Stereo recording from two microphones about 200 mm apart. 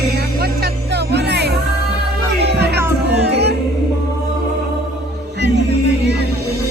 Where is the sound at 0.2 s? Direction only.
50° right (ahead or behind).